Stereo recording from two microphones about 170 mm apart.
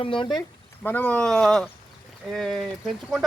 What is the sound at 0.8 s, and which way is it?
Speech, 10° left (ahead or behind).